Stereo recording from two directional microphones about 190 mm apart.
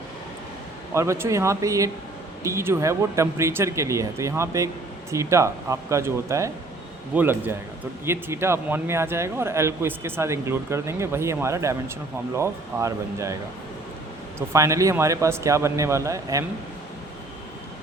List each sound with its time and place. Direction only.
0.9 s speech: 15° right (ahead or behind)